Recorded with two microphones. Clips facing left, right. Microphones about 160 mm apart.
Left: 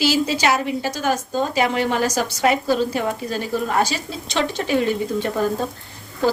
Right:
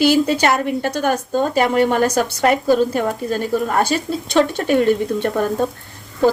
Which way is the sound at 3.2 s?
50° right (ahead or behind).